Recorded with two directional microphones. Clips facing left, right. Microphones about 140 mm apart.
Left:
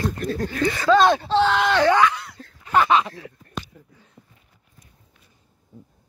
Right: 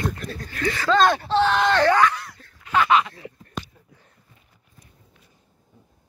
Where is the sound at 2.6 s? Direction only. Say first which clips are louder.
Left 1 dB; 35° left (ahead or behind).